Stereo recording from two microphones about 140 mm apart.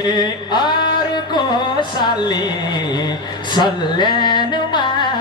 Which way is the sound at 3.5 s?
30° left (ahead or behind).